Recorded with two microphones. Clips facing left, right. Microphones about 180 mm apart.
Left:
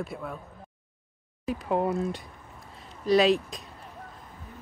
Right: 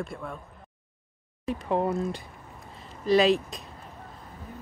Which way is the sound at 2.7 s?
Centre (ahead or behind).